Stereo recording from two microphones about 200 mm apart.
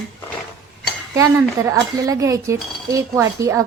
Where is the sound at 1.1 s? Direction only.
15° right (ahead or behind).